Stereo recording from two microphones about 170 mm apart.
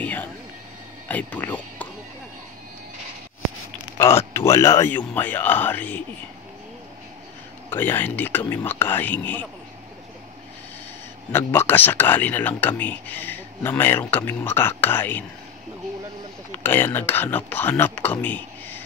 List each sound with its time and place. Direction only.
0.0 s a sound: 10° left (ahead or behind)
1.0 s speech: 10° left (ahead or behind)
4.0 s speech: 15° left (ahead or behind)
7.7 s speech: 10° left (ahead or behind)
11.3 s speech: 15° left (ahead or behind)
16.5 s speech: 10° left (ahead or behind)